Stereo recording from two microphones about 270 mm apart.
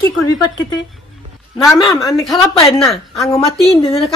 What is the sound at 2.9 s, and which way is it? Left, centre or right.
Speech, centre.